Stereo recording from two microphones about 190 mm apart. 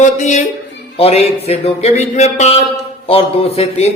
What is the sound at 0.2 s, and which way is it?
A man's voice, 40° left (ahead or behind).